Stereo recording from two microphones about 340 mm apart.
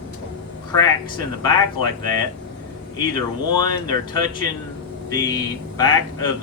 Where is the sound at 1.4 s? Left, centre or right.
Centre.